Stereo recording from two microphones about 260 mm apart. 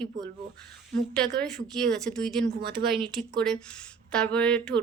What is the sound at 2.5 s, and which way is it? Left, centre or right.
Speech, right.